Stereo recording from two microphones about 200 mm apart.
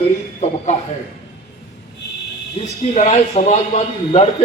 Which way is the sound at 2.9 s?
35° left (ahead or behind).